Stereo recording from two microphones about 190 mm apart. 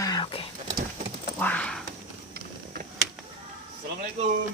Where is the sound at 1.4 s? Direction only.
10° left (ahead or behind).